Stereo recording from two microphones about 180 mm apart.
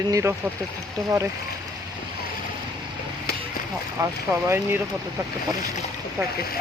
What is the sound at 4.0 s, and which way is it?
Speech, 15° right (ahead or behind).